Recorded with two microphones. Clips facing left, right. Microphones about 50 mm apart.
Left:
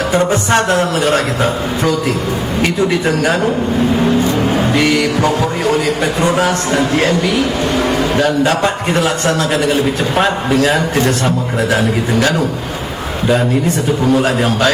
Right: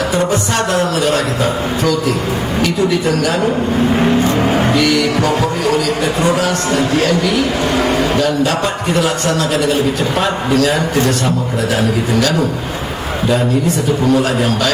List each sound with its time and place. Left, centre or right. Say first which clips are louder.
0.1 s a man's voice: left 3 dB; left
4.2 s vehicle: right 1 dB; right
6.3 s a man's voice: left 1 dB; left
14.1 s a man's voice: left 1 dB; left